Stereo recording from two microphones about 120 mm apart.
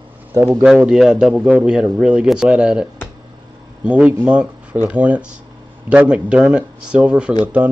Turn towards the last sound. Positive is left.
turn(degrees=-10)  # may be behind; listen again after turning